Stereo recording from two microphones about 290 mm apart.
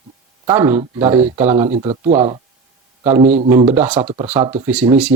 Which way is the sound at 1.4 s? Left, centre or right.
Right.